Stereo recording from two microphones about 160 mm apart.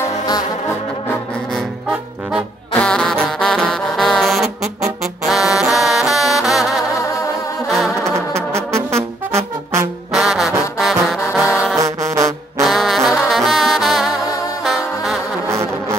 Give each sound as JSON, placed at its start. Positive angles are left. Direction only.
{"t": 2.7, "sound": "music", "side_deg": 5}
{"t": 5.0, "sound": "brass instrument", "side_deg": 0}
{"t": 7.0, "sound": "music", "side_deg": 20}
{"t": 7.6, "sound": "music", "side_deg": 0}
{"t": 8.3, "sound": "brass instrument", "side_deg": -15}
{"t": 10.1, "sound": "trombone", "side_deg": 0}
{"t": 10.8, "sound": "brass instrument", "side_deg": 0}
{"t": 11.8, "sound": "music", "side_deg": -20}
{"t": 12.6, "sound": "brass instrument", "side_deg": 0}
{"t": 14.6, "sound": "music", "side_deg": 0}